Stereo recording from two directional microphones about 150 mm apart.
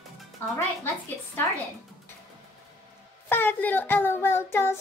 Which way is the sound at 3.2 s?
15° left (ahead or behind).